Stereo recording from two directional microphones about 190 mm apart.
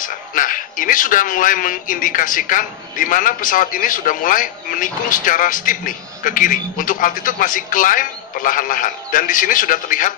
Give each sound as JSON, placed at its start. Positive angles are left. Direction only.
{"t": 0.0, "sound": "speech", "side_deg": 45}